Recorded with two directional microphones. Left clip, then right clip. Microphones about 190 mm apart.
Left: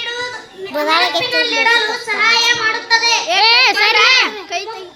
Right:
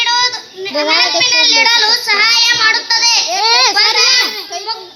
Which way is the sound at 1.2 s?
30° right (ahead or behind).